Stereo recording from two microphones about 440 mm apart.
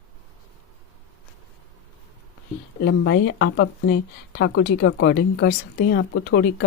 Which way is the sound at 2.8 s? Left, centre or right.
Left.